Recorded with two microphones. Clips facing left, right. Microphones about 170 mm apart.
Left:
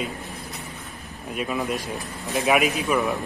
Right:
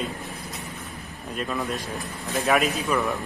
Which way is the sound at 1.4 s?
10° left (ahead or behind).